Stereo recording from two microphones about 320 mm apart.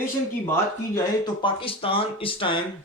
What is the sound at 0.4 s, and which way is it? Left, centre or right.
Speech, centre.